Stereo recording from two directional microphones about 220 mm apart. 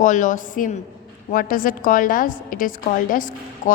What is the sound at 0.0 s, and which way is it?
A woman's voice, 35° left (ahead or behind).